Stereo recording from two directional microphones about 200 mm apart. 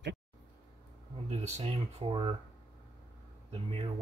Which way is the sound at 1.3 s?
30° right (ahead or behind).